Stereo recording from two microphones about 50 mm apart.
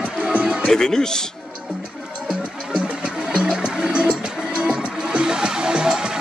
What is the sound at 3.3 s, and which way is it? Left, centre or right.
Music, centre.